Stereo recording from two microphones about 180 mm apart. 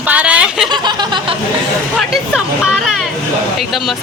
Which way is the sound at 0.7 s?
25° right (ahead or behind).